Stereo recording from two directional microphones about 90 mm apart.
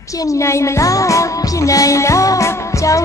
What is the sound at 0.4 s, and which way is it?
Music, 35° left (ahead or behind).